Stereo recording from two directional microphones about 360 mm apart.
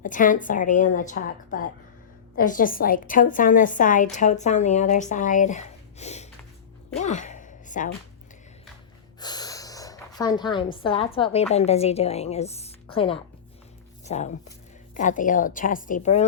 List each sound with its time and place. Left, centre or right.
0.0 s a woman's voice: left
7.0 s a sound: centre
9.2 s a woman's voice: centre